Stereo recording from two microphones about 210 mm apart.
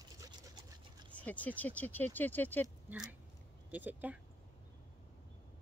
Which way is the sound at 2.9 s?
10° right (ahead or behind).